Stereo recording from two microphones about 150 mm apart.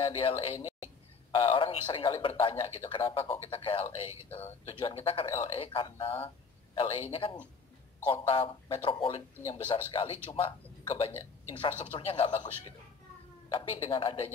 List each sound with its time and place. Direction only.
0.0 s a man's voice: 35° left (ahead or behind)
10.8 s a sound: 35° left (ahead or behind)
11.6 s a man's voice: 35° left (ahead or behind)
13.5 s a man's voice: 35° left (ahead or behind)